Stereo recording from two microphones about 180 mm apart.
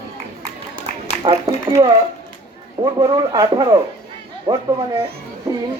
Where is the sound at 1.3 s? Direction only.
30° right (ahead or behind).